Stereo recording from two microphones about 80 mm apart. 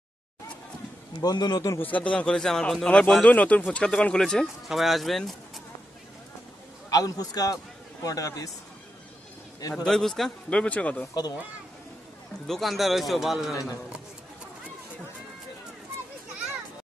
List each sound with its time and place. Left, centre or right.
1.2 s a man's voice: left
1.8 s speech: centre
6.9 s a man's voice: left
9.6 s a man's voice: left
9.8 s a man's voice: centre
10.5 s speech: centre
12.4 s a man's voice: centre